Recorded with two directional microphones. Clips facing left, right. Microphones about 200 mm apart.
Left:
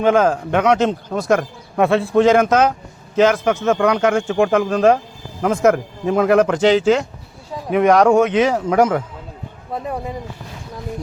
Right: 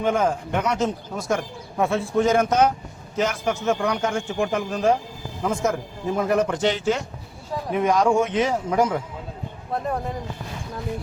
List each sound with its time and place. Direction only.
0.0 s a man's voice: 90° left
5.4 s a man's voice: 65° left (ahead or behind); by 7.0 s 90° left
7.7 s a man's voice: 70° left (ahead or behind)
9.7 s speech: 5° left (ahead or behind)